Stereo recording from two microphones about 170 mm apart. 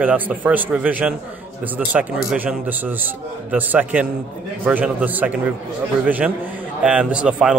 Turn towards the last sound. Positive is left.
turn(degrees=-5)  # may be behind; listen again after turning